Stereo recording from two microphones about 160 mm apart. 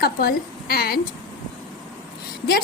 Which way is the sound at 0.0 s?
70° left (ahead or behind).